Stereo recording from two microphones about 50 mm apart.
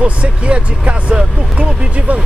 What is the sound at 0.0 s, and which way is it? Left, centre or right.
Speech, right.